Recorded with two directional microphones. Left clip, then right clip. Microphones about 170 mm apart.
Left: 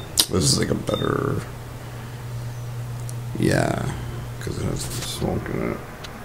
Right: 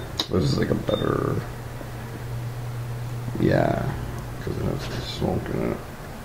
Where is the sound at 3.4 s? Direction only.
20° left (ahead or behind).